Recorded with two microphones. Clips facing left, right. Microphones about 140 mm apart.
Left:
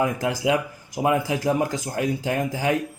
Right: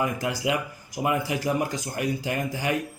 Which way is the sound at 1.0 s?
75° left (ahead or behind).